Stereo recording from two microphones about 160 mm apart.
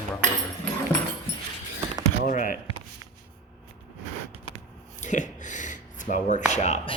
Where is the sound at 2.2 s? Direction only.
60° left (ahead or behind).